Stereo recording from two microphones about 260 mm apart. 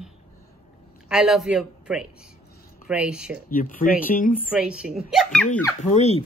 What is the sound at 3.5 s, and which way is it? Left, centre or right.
Speech, left.